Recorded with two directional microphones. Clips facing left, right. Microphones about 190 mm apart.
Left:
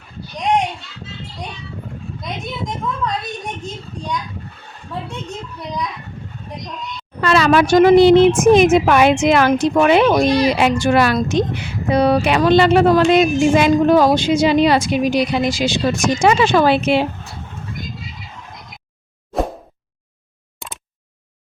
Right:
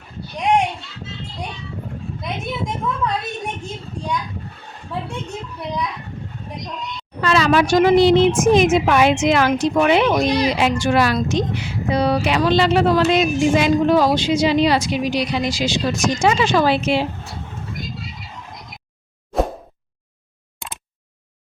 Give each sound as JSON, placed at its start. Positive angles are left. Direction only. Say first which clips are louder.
{"t": 3.0, "sound": "speech", "louder": "even", "side_deg": -10}
{"t": 7.2, "sound": "speech", "louder": "left 2 dB", "side_deg": 60}